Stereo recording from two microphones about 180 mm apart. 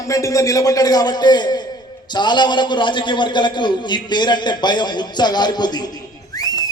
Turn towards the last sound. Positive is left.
turn(degrees=20)  # may be behind; listen again after turning